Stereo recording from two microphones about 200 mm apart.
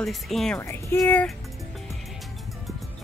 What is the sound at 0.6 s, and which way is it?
Speech, 15° left (ahead or behind).